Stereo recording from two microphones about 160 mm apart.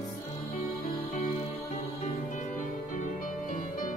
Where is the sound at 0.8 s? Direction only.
50° left (ahead or behind).